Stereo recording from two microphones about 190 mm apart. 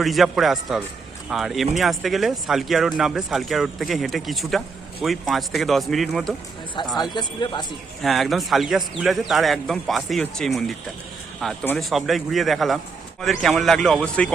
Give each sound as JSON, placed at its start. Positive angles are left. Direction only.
{"t": 0.0, "sound": "speech", "side_deg": 0}
{"t": 6.9, "sound": "a man's voice", "side_deg": 20}
{"t": 8.0, "sound": "speech", "side_deg": 0}